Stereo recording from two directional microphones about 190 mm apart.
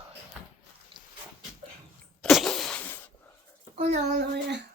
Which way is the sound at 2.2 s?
Centre (ahead or behind).